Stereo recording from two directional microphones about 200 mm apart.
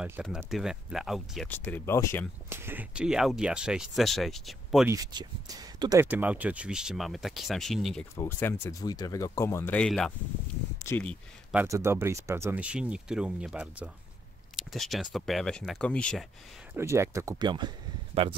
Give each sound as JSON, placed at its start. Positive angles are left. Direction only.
{"t": 0.0, "sound": "speech", "side_deg": -5}
{"t": 1.5, "sound": "speech", "side_deg": 10}
{"t": 2.5, "sound": "speech", "side_deg": -10}
{"t": 4.8, "sound": "speech", "side_deg": -20}
{"t": 11.5, "sound": "speech", "side_deg": -15}
{"t": 16.7, "sound": "speech", "side_deg": -15}